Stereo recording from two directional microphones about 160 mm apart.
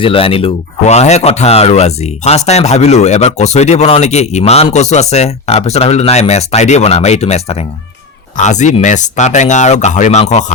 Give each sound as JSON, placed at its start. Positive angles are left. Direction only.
{"t": 0.0, "sound": "speech", "side_deg": 35}